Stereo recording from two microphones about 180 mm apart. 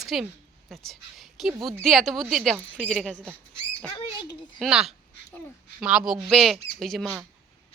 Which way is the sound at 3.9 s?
25° left (ahead or behind).